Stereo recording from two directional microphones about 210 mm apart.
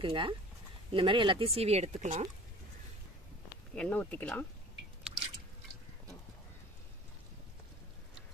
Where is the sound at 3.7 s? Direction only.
5° left (ahead or behind).